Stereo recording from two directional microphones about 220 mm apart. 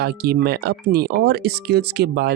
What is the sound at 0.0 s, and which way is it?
Speech, 45° right (ahead or behind).